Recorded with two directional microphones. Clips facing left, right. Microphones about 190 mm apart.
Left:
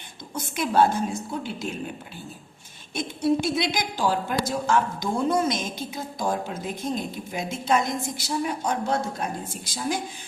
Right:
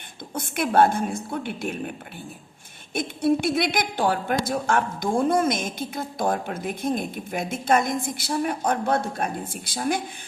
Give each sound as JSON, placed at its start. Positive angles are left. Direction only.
{"t": 0.3, "sound": "a woman's voice", "side_deg": -55}
{"t": 2.9, "sound": "a woman's voice", "side_deg": -55}